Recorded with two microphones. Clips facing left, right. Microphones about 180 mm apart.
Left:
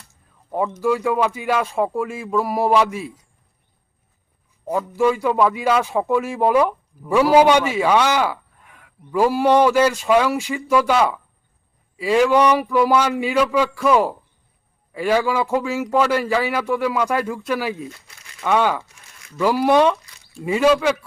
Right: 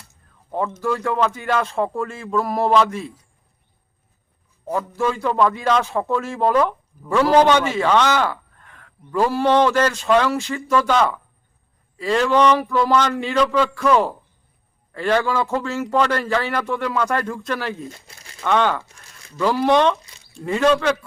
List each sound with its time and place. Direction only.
0.5 s a man's voice: 10° left (ahead or behind)
4.6 s a man's voice: 15° left (ahead or behind)
17.9 s crumpling: 30° right (ahead or behind)
18.4 s a man's voice: 10° left (ahead or behind)